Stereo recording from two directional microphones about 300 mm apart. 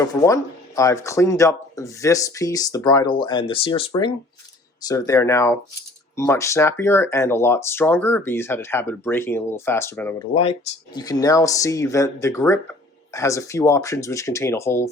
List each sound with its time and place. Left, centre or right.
0.0 s speech: centre